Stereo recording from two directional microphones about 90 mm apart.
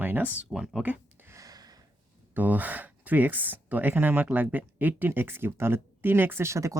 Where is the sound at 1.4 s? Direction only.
45° right (ahead or behind).